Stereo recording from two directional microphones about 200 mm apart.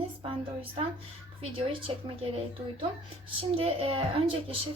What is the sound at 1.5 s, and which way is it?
Speech, 25° right (ahead or behind).